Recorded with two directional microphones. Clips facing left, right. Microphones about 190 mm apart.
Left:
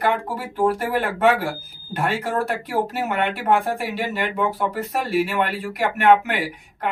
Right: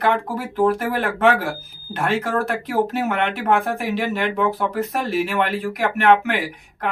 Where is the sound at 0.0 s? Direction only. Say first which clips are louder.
Right 2 dB; 10° left (ahead or behind).